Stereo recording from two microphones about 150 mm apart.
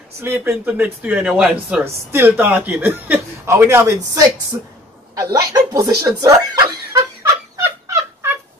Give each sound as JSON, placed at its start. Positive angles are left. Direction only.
{"t": 0.2, "sound": "speech", "side_deg": -15}
{"t": 7.8, "sound": "fowl", "side_deg": -20}